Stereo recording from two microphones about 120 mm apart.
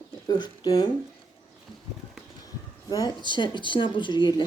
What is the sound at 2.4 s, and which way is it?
Speech, 30° left (ahead or behind).